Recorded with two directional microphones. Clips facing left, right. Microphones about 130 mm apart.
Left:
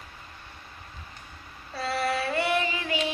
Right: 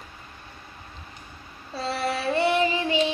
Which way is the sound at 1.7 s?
25° right (ahead or behind).